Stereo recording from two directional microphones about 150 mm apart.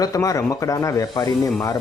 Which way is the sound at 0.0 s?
20° left (ahead or behind).